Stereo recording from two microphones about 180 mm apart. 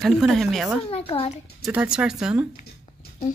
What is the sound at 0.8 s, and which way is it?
Speech, 30° left (ahead or behind).